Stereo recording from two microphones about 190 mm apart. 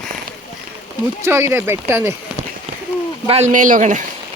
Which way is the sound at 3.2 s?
35° right (ahead or behind).